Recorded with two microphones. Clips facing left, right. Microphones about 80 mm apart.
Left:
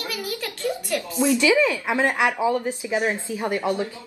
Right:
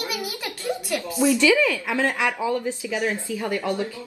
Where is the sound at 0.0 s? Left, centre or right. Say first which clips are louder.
Even; centre.